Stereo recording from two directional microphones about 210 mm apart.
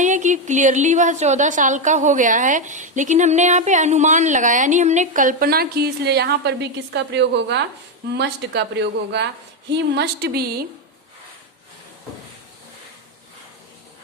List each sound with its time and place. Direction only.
0.0 s a woman's voice: 35° right (ahead or behind)